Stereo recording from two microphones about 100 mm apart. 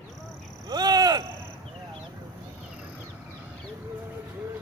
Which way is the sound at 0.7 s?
40° right (ahead or behind).